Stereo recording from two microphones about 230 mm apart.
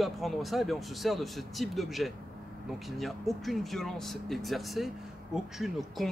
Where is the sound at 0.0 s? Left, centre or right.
Centre.